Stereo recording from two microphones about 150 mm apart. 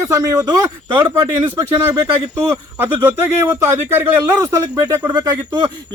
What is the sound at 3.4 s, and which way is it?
Speech, 15° right (ahead or behind).